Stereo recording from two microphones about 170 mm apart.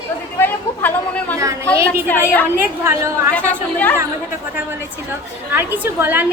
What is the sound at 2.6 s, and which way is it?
Speech, 15° right (ahead or behind).